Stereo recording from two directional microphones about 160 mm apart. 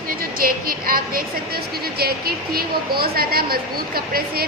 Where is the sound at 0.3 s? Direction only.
65° right (ahead or behind).